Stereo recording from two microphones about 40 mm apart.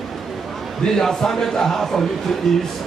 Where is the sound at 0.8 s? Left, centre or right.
Centre.